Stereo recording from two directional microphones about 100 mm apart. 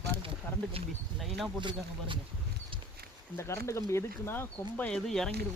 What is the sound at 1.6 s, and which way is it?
Speech, 50° right (ahead or behind).